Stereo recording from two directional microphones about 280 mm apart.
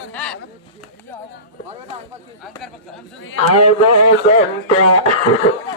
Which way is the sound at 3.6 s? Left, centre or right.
Left.